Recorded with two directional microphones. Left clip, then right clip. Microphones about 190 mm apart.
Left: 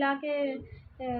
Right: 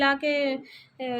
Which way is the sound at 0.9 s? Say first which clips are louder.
Right 3 dB; 55° right (ahead or behind).